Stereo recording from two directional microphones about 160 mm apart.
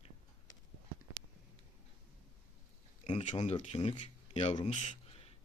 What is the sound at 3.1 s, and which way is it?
Speech, 45° left (ahead or behind).